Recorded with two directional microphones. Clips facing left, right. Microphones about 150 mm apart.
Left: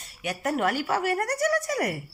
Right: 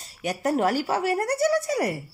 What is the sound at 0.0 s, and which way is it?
Speech, 35° right (ahead or behind).